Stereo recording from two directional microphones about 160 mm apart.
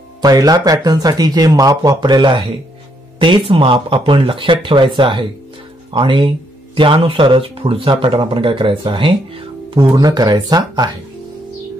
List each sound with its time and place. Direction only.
0.2 s speech: 25° right (ahead or behind)